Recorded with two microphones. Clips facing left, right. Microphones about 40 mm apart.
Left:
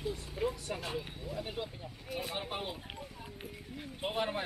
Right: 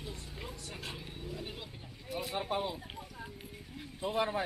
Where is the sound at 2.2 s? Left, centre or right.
Left.